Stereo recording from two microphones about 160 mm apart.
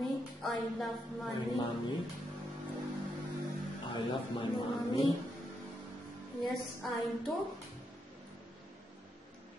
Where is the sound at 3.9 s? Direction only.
30° left (ahead or behind).